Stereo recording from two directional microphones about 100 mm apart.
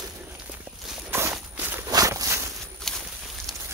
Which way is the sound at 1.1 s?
20° right (ahead or behind).